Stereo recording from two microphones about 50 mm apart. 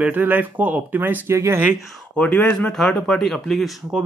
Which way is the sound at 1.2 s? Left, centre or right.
Right.